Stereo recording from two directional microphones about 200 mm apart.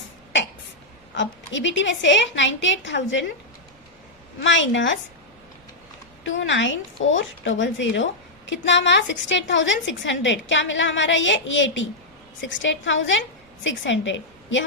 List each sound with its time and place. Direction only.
1.1 s a woman's voice: 65° left (ahead or behind)
4.4 s a woman's voice: 70° left (ahead or behind)
6.2 s a woman's voice: 70° left (ahead or behind)